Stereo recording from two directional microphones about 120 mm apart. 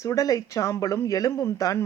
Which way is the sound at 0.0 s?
25° left (ahead or behind).